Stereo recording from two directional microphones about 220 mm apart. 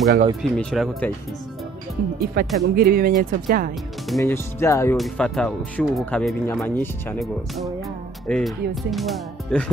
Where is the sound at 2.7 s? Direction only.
45° right (ahead or behind).